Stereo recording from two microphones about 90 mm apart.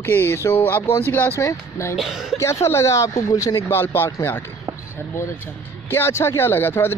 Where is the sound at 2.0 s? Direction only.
5° right (ahead or behind).